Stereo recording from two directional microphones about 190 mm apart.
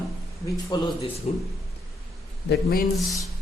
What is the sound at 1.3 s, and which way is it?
Speech, 35° left (ahead or behind).